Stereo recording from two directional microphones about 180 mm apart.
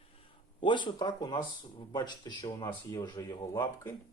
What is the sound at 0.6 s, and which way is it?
Speech, 25° left (ahead or behind).